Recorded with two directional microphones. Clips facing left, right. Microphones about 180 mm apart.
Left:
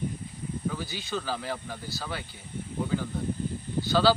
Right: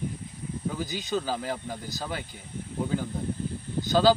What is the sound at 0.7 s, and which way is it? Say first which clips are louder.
Speech: right 4 dB; 15° right (ahead or behind).